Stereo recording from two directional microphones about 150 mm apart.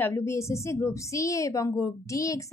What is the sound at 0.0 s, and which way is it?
A woman's voice, 15° left (ahead or behind).